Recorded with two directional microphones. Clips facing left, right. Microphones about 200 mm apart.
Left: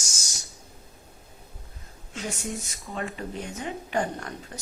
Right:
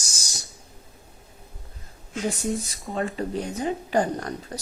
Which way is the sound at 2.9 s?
35° right (ahead or behind).